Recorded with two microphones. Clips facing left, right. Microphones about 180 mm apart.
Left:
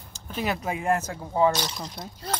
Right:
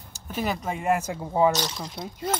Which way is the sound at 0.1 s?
5° right (ahead or behind).